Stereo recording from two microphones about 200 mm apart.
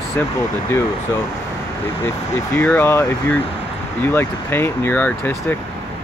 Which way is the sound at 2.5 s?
10° left (ahead or behind).